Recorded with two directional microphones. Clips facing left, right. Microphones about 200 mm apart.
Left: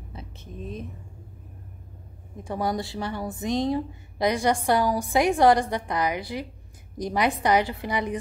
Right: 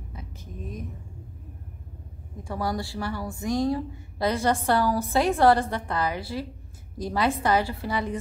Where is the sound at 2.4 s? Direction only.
20° left (ahead or behind).